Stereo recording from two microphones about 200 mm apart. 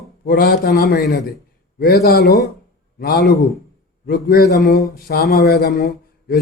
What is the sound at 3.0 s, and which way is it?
A man's voice, 50° left (ahead or behind).